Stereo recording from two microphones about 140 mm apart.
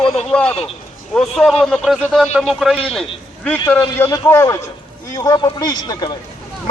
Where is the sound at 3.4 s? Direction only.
15° left (ahead or behind).